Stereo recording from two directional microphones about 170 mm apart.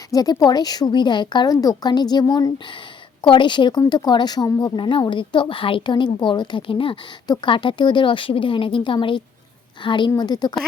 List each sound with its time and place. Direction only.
0.1 s speech: 20° left (ahead or behind)